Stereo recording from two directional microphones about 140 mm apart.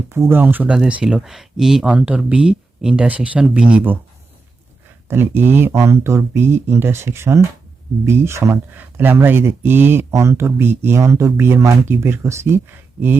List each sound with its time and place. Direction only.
0.1 s speech: 15° right (ahead or behind)
5.0 s speech: 15° right (ahead or behind)